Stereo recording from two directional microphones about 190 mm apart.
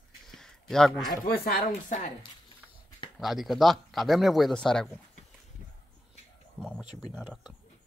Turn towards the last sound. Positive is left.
turn(degrees=-5)  # may be behind; listen again after turning